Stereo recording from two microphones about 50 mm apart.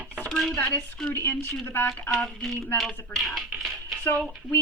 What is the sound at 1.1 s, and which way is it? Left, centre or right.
Speech, left.